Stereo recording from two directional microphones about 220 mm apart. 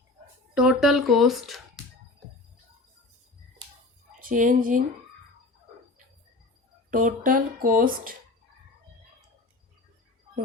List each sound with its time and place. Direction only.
0.5 s speech: 5° right (ahead or behind)
4.2 s speech: 35° right (ahead or behind)
6.9 s speech: 35° right (ahead or behind)